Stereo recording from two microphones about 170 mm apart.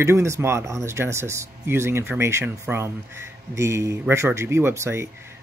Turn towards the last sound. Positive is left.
turn(degrees=-15)  # may be behind; listen again after turning